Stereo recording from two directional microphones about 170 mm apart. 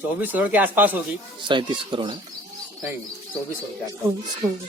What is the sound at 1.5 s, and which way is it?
Speech, 30° right (ahead or behind).